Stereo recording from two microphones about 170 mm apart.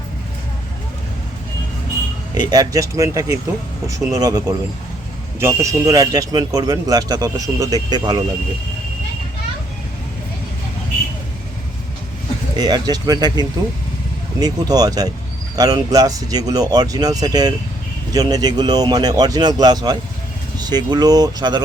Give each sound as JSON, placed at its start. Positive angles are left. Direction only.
{"t": 2.3, "sound": "a man's voice", "side_deg": -20}
{"t": 12.5, "sound": "a man's voice", "side_deg": -25}